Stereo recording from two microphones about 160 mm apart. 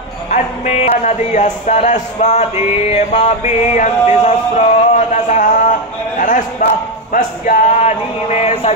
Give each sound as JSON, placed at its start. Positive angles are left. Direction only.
{"t": 0.3, "sound": "speech", "side_deg": 45}